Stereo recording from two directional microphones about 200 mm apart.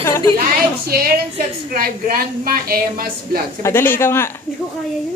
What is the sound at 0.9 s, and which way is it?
A woman's voice, 50° right (ahead or behind).